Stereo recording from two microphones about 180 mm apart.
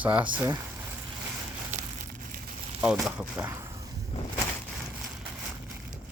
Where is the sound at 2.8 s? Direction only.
10° right (ahead or behind).